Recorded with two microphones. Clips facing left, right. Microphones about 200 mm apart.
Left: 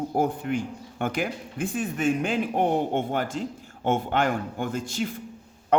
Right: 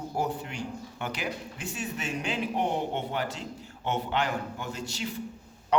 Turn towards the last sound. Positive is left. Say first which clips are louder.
# left 6 dB
turn(degrees=50)  # may be behind; listen again after turning